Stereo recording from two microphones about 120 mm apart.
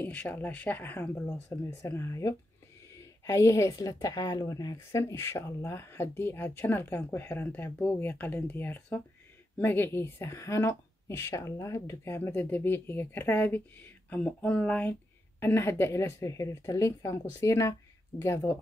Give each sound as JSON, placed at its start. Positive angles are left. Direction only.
{"t": 0.0, "sound": "a woman's voice", "side_deg": 15}